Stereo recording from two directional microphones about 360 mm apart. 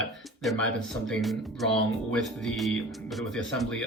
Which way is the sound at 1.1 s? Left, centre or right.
Centre.